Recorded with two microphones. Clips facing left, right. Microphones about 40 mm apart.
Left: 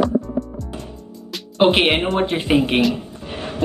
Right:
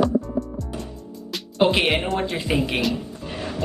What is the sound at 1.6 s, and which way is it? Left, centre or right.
Speech, left.